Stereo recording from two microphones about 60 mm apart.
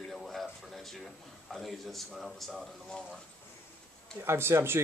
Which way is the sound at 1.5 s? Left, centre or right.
Centre.